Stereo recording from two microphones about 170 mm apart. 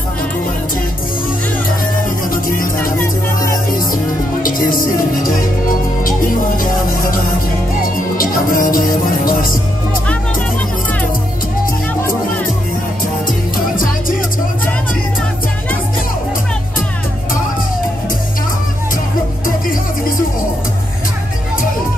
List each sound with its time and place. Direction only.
2.3 s music: 55° left (ahead or behind)
3.9 s music: 55° left (ahead or behind)